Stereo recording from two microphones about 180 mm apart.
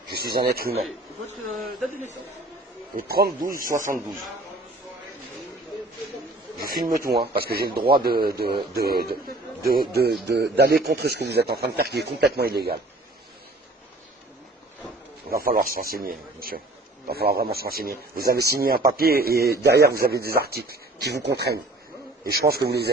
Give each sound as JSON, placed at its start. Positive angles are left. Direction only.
{"t": 0.1, "sound": "speech", "side_deg": -60}
{"t": 3.0, "sound": "a man's voice", "side_deg": -55}
{"t": 6.6, "sound": "a man's voice", "side_deg": -55}
{"t": 10.2, "sound": "a man's voice", "side_deg": -70}
{"t": 15.2, "sound": "a man's voice", "side_deg": -55}